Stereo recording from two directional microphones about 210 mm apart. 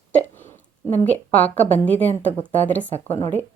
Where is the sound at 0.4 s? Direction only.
30° left (ahead or behind).